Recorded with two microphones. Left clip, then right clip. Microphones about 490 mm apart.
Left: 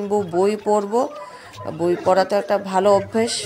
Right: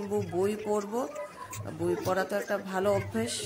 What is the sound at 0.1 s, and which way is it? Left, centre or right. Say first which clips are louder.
Speech: left 11 dB; right.